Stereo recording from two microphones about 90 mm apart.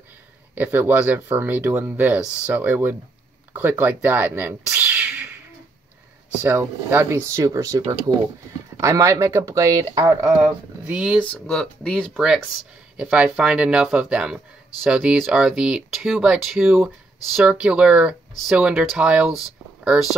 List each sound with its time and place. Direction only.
0.6 s speech: 20° right (ahead or behind)
6.4 s speech: 30° right (ahead or behind)
10.8 s speech: 10° right (ahead or behind)
11.2 s speech: 10° left (ahead or behind)
12.9 s speech: 15° right (ahead or behind)